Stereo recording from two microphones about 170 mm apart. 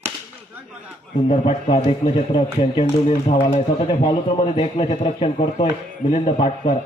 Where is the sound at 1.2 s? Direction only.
35° left (ahead or behind).